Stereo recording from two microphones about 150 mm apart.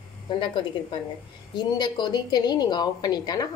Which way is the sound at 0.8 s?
35° left (ahead or behind).